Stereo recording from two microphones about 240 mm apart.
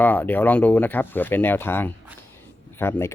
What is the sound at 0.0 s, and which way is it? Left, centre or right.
Speech, centre.